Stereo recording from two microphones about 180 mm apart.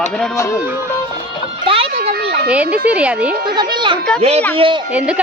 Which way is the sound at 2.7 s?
5° right (ahead or behind).